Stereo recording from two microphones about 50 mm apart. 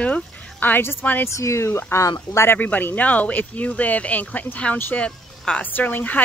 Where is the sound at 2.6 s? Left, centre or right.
Left.